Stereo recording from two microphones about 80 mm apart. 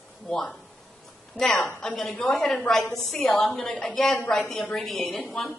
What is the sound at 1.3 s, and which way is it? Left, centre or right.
A woman's voice, centre.